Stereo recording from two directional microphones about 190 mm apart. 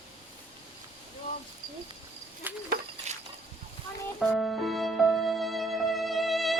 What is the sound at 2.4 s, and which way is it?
Cricket, 10° right (ahead or behind).